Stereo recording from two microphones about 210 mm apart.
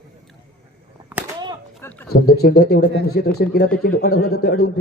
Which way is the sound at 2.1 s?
50° left (ahead or behind).